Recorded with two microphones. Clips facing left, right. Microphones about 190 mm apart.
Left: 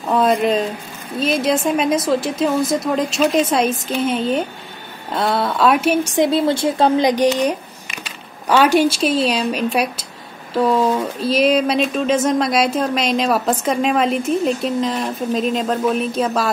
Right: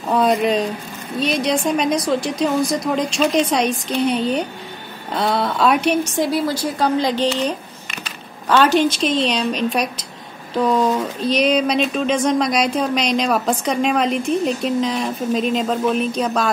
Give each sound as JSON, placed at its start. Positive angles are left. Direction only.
{"t": 0.1, "sound": "speech", "side_deg": 0}
{"t": 6.1, "sound": "a woman's voice", "side_deg": 25}